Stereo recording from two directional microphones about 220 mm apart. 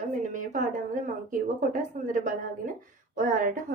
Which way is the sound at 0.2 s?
35° right (ahead or behind).